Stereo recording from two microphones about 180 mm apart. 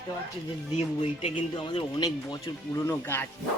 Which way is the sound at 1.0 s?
30° left (ahead or behind).